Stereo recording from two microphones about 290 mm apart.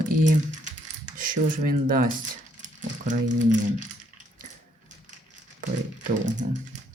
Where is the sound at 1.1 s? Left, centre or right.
Right.